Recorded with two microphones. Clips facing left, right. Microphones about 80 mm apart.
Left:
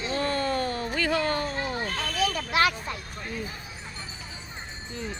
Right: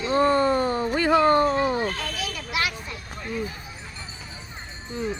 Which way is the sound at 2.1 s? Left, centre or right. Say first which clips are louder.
Left 4 dB; left.